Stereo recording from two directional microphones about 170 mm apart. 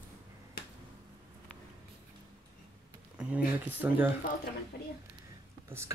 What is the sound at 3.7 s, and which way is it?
Speech, 10° right (ahead or behind).